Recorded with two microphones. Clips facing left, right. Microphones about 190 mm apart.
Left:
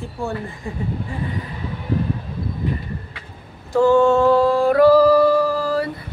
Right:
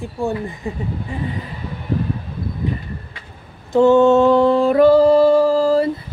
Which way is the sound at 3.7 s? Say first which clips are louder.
Right 3 dB; 20° right (ahead or behind).